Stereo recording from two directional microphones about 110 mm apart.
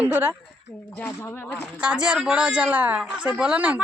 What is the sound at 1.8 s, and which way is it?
Speech, 10° right (ahead or behind).